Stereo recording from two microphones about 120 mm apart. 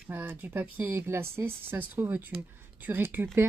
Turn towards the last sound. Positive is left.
turn(degrees=-20)  # may be behind; listen again after turning